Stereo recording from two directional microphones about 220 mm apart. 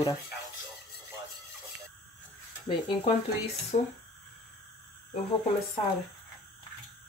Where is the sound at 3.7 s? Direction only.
30° left (ahead or behind).